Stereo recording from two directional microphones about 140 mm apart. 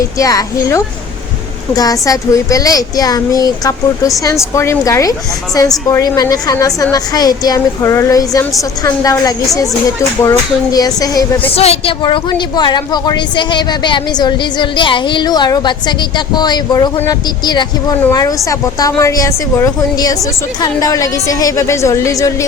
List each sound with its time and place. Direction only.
0.2 s a woman's voice: 25° left (ahead or behind)
11.5 s a woman's voice: 45° left (ahead or behind); by 22.4 s 20° left (ahead or behind)